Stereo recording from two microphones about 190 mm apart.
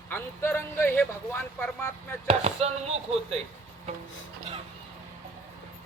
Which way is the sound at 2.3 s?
35° right (ahead or behind).